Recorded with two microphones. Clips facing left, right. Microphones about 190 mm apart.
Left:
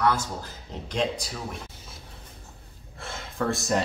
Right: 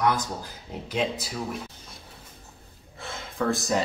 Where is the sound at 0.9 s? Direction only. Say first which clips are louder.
Even; 5° right (ahead or behind).